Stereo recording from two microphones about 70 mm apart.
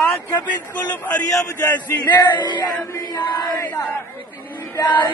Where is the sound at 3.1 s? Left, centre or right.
Left.